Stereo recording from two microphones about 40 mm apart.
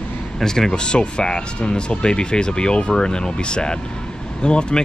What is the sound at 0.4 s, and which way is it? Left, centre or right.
Speech, centre.